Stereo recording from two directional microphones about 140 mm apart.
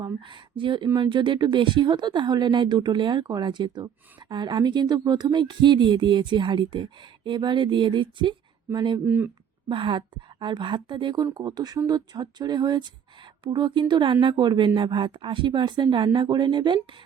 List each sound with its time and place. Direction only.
0.0 s a woman's voice: 35° right (ahead or behind)
9.0 s speech: 15° right (ahead or behind)
9.6 s a woman's voice: 35° right (ahead or behind)